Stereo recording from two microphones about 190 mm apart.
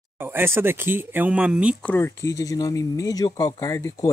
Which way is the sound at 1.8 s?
10° left (ahead or behind).